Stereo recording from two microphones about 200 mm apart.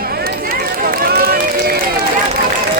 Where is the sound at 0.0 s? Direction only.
50° right (ahead or behind).